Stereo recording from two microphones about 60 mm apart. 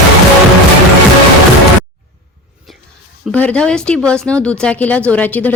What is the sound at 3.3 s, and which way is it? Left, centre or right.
Speech, left.